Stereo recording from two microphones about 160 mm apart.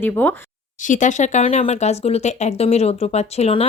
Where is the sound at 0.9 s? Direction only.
50° left (ahead or behind).